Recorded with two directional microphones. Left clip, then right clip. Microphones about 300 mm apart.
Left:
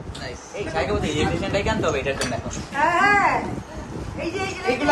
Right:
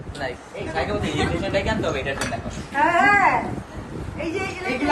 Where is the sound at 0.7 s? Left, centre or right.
Centre.